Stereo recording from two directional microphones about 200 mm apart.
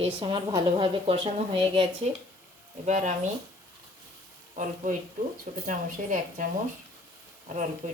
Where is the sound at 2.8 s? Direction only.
40° right (ahead or behind).